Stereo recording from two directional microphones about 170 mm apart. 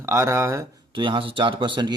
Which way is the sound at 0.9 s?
30° right (ahead or behind).